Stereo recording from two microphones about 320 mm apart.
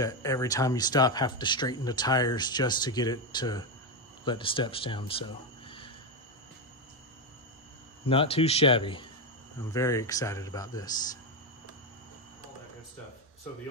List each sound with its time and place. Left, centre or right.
0.0 s speech: centre
8.1 s speech: centre